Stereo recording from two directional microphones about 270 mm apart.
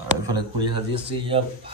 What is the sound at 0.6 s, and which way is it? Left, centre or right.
Speech, centre.